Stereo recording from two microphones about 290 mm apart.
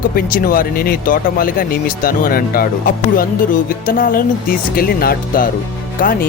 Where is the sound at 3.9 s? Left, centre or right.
Left.